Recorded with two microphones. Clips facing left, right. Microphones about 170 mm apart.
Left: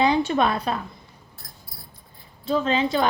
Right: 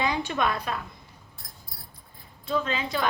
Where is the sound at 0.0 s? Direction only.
30° left (ahead or behind).